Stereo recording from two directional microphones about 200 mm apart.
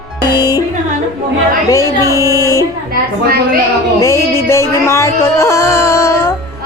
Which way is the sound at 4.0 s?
15° left (ahead or behind).